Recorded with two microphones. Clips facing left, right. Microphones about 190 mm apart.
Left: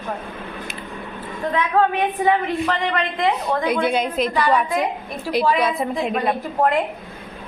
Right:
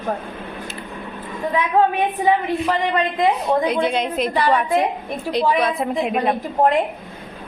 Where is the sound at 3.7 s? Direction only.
5° left (ahead or behind).